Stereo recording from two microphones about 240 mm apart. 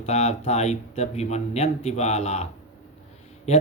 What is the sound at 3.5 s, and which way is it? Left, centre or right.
Speech, left.